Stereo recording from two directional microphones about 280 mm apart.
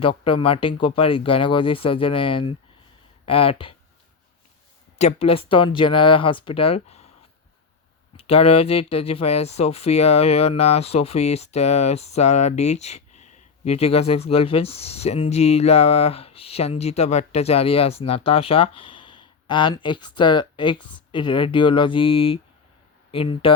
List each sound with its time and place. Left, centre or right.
0.0 s speech: centre
4.9 s speech: left
8.1 s speech: left